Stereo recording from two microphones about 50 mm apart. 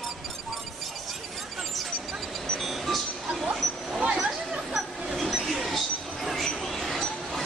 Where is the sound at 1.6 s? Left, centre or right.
Centre.